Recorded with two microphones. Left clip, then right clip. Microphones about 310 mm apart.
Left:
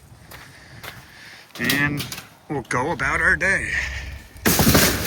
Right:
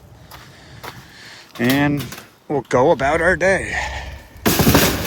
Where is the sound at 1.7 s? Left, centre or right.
Centre.